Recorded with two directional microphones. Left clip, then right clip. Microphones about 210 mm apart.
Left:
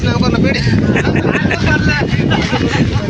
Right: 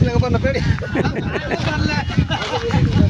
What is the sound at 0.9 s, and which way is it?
Speech, 5° right (ahead or behind).